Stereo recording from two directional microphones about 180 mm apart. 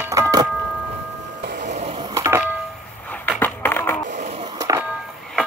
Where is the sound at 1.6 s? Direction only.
40° right (ahead or behind).